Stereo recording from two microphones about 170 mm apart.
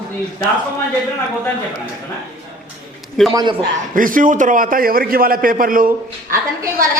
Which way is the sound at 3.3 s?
20° right (ahead or behind).